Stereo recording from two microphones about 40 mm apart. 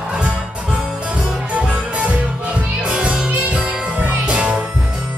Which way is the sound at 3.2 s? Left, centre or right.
Right.